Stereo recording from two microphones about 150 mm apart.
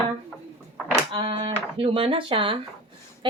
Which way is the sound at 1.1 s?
35° right (ahead or behind).